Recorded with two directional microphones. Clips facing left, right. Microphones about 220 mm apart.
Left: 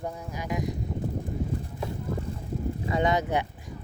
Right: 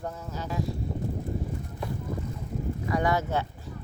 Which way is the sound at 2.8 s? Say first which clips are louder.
Left 1 dB; 20° left (ahead or behind).